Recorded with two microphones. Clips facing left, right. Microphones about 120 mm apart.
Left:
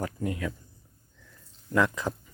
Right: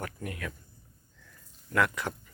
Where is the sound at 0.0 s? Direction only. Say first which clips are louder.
Left 6 dB; 25° left (ahead or behind).